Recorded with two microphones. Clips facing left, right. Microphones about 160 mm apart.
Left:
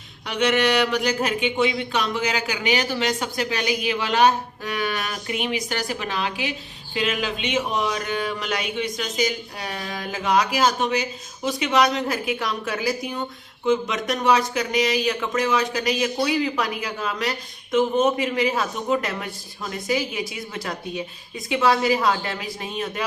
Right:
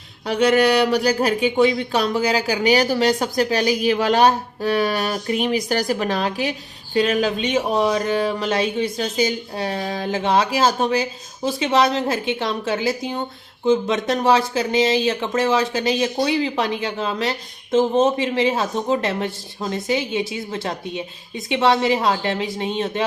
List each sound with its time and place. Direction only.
0.3 s speech: 35° right (ahead or behind)